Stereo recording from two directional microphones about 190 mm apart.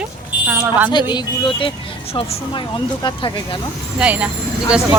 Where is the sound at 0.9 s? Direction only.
25° left (ahead or behind).